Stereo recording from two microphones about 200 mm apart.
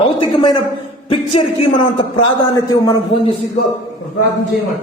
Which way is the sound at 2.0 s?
20° left (ahead or behind).